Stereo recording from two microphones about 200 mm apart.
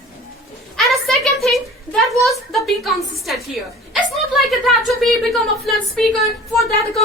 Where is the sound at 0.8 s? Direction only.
Centre (ahead or behind).